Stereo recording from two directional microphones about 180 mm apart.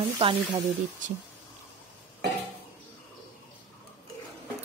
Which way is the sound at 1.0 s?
45° right (ahead or behind).